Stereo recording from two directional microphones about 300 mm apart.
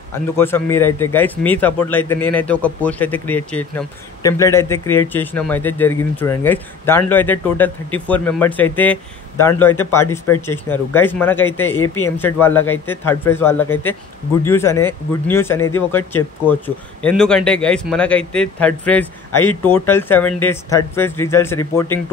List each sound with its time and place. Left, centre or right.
0.1 s a man's voice: centre
11.8 s speech: left
12.2 s a man's voice: centre